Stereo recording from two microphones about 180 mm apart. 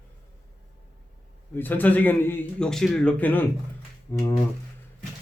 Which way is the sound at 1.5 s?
10° left (ahead or behind).